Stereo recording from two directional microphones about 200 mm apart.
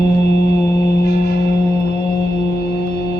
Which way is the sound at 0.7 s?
55° left (ahead or behind).